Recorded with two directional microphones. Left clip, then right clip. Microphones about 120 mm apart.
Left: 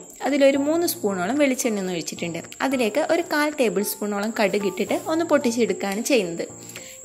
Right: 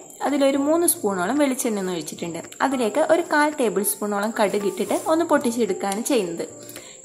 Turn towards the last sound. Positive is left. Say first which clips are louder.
# left 1 dB
turn(degrees=35)  # may be behind; listen again after turning